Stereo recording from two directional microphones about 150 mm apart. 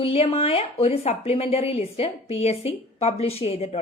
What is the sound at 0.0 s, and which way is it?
A woman's voice, 40° left (ahead or behind).